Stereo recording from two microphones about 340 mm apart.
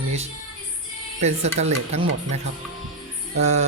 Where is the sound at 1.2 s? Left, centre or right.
Centre.